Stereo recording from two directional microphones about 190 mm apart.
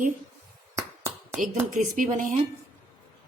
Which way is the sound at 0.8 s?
15° right (ahead or behind).